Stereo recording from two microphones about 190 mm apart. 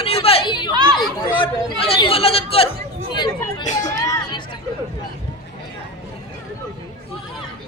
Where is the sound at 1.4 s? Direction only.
25° left (ahead or behind).